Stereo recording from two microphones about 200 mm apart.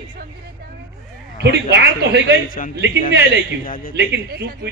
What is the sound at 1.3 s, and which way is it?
A man's voice, 60° right (ahead or behind).